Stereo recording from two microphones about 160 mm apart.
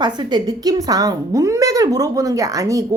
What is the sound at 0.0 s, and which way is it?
A woman's voice, 25° right (ahead or behind).